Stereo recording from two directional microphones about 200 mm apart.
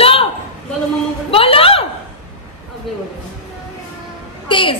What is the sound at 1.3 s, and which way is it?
Speech, 30° left (ahead or behind).